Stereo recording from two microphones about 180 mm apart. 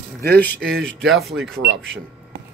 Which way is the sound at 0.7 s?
5° left (ahead or behind).